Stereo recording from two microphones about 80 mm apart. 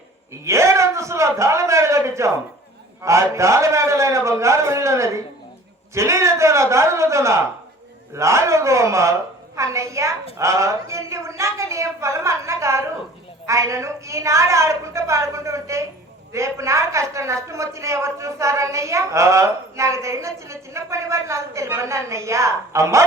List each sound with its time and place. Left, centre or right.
0.4 s a man's voice: right